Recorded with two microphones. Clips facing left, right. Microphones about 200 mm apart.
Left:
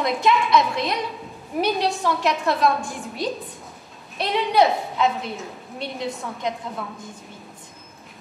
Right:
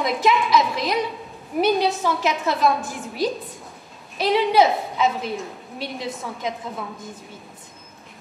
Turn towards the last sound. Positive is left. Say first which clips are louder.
# even
turn(degrees=0)  # may be behind; listen again after turning